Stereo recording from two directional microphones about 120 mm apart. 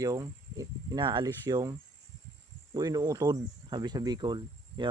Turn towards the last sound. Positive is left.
turn(degrees=-40)  # may be behind; listen again after turning